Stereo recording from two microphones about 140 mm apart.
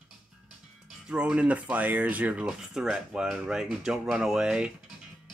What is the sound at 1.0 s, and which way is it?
Speech, 5° right (ahead or behind).